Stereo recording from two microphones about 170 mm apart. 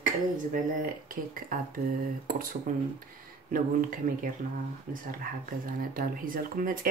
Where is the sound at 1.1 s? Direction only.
55° right (ahead or behind).